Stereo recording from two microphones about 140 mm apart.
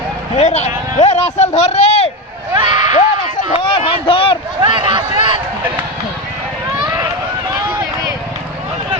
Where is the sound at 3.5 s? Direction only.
35° left (ahead or behind).